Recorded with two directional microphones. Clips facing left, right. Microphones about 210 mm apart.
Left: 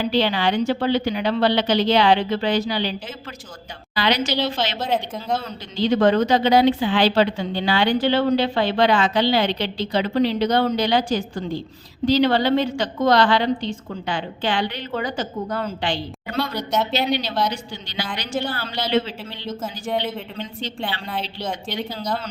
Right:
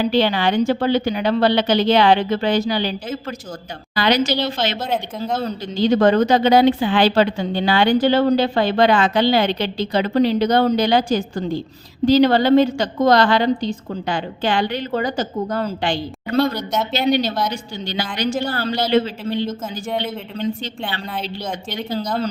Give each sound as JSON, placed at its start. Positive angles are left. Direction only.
{"t": 0.1, "sound": "speech", "side_deg": -50}
{"t": 4.8, "sound": "speech", "side_deg": 0}
{"t": 5.4, "sound": "speech", "side_deg": -40}
{"t": 16.6, "sound": "speech", "side_deg": 0}
{"t": 17.5, "sound": "speech", "side_deg": -50}
{"t": 19.6, "sound": "speech", "side_deg": 0}
{"t": 21.4, "sound": "speech", "side_deg": 0}